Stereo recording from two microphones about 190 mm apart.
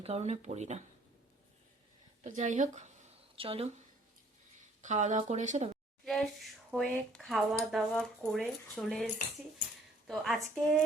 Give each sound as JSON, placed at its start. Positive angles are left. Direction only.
{"t": 0.0, "sound": "speech", "side_deg": -35}
{"t": 2.2, "sound": "speech", "side_deg": -40}
{"t": 4.8, "sound": "speech", "side_deg": -40}
{"t": 6.1, "sound": "a woman's voice", "side_deg": 0}
{"t": 10.1, "sound": "speech", "side_deg": 0}